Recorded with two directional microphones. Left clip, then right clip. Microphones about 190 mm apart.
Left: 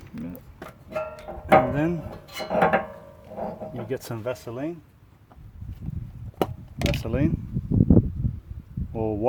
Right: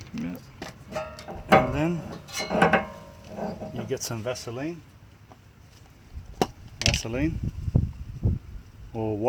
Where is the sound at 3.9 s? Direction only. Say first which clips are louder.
Even; 45° left (ahead or behind).